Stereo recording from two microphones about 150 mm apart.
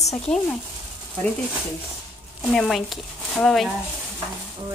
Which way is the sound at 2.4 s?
Centre (ahead or behind).